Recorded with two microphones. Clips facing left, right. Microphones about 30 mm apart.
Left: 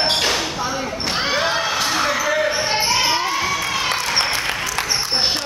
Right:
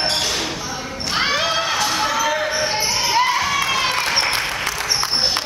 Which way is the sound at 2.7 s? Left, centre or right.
Left.